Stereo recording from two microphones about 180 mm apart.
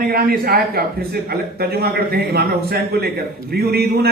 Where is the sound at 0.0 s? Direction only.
55° right (ahead or behind).